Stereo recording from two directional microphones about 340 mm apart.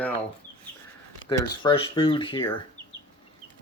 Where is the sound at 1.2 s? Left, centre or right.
Centre.